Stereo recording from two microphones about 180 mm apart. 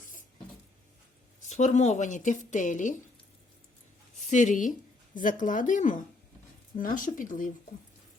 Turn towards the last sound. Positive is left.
turn(degrees=50)  # may be behind; listen again after turning